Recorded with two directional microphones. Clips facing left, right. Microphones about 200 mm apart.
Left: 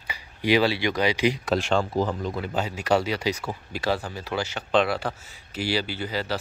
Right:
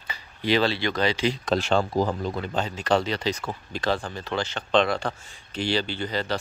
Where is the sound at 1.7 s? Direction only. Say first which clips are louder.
Right 2 dB; 40° right (ahead or behind).